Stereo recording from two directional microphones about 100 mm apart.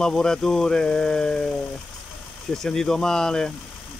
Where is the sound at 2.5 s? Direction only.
5° left (ahead or behind).